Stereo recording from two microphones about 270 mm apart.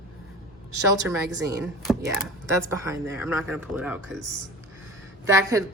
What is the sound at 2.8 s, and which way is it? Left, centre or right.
Speech, centre.